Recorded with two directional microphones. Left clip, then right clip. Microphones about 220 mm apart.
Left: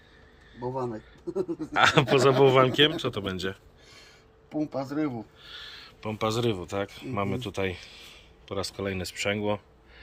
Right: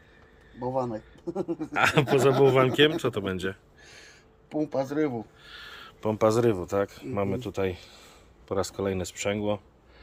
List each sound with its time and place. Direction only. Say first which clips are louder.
0.8 s speech: right 3 dB; 35° right (ahead or behind)
1.7 s a man's voice: left 2 dB; 5° right (ahead or behind)
4.6 s speech: right 3 dB; 60° right (ahead or behind)
5.4 s speech: left 1 dB; 10° right (ahead or behind)